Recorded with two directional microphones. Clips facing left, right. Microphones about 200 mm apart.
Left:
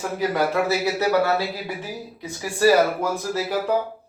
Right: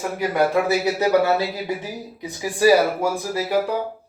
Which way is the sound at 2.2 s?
15° right (ahead or behind).